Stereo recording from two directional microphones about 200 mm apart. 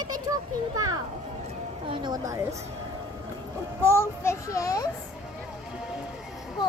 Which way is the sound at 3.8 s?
10° left (ahead or behind).